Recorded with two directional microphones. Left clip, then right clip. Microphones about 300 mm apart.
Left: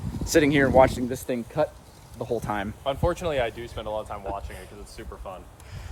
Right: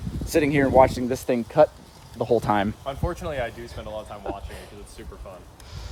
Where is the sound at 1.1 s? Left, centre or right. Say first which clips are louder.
Right 5 dB; right.